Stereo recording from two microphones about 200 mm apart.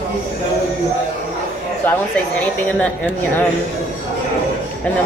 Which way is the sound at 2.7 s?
10° left (ahead or behind).